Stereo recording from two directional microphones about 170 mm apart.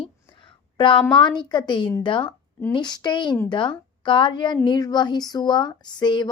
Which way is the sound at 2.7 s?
25° left (ahead or behind).